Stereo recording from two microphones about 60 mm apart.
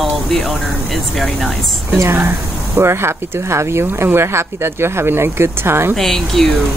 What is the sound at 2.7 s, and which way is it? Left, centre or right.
Speech, right.